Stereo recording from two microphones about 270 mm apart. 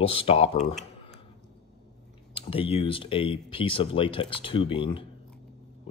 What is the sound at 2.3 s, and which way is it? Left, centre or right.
Speech, centre.